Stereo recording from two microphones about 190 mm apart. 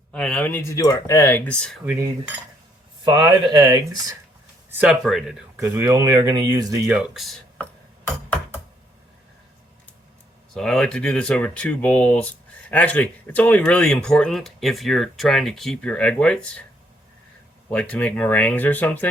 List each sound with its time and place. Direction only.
0.1 s speech: 5° left (ahead or behind)
1.8 s cutlery: 10° right (ahead or behind)
3.0 s speech: 20° right (ahead or behind)
4.7 s speech: 5° right (ahead or behind)
5.5 s speech: 15° right (ahead or behind)
6.8 s speech: 5° right (ahead or behind)
10.5 s speech: 5° left (ahead or behind)
17.7 s speech: 5° left (ahead or behind)